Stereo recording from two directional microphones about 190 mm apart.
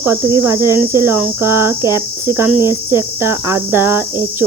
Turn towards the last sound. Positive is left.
turn(degrees=-10)  # may be behind; listen again after turning